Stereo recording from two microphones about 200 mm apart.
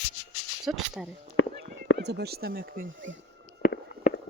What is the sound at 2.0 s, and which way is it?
Speech, 55° right (ahead or behind).